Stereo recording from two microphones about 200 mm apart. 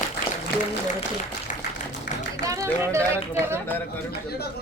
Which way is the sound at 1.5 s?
40° left (ahead or behind).